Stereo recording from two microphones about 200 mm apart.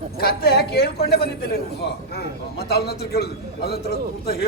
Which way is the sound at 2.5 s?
55° left (ahead or behind).